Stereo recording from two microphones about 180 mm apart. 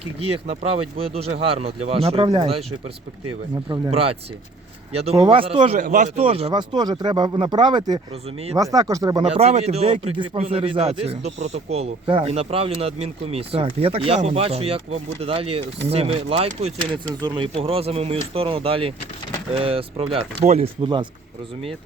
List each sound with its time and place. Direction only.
0.2 s speech: 35° right (ahead or behind)
3.7 s speech: 30° right (ahead or behind)
5.7 s speech: 50° right (ahead or behind)
6.1 s speech: 35° right (ahead or behind)
9.3 s speech: 35° right (ahead or behind)